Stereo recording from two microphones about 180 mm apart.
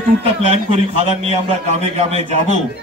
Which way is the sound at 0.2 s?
35° right (ahead or behind).